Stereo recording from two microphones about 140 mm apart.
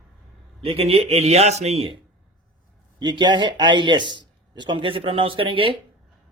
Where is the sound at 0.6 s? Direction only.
45° right (ahead or behind).